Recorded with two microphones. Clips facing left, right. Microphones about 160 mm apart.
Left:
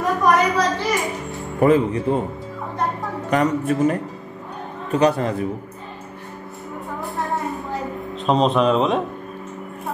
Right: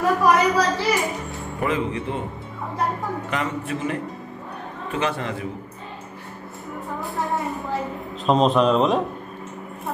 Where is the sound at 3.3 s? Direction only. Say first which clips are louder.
Left 11 dB; 45° left (ahead or behind).